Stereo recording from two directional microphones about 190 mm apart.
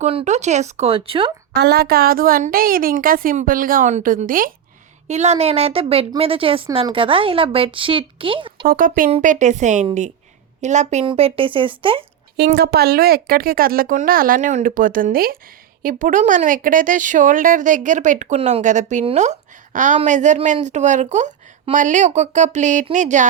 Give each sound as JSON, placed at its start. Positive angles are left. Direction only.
{"t": 0.0, "sound": "speech", "side_deg": -35}
{"t": 1.5, "sound": "a woman's voice", "side_deg": -60}
{"t": 5.0, "sound": "speech", "side_deg": -35}
{"t": 8.6, "sound": "a woman's voice", "side_deg": -45}
{"t": 12.5, "sound": "a woman's voice", "side_deg": -55}